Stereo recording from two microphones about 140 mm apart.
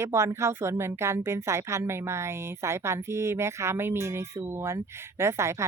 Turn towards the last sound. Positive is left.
turn(degrees=-20)  # may be behind; listen again after turning